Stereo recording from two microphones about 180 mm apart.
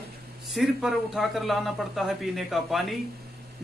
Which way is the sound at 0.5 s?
Centre (ahead or behind).